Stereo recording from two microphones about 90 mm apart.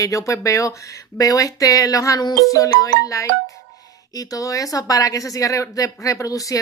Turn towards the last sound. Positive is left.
turn(degrees=40)  # may be behind; listen again after turning